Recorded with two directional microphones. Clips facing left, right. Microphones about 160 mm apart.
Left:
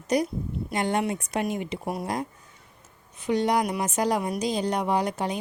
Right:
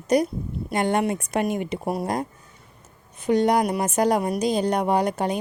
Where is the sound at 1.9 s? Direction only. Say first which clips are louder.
Right 4 dB; 40° right (ahead or behind).